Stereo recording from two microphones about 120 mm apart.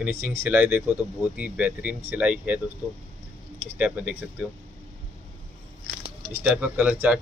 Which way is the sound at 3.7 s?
10° right (ahead or behind).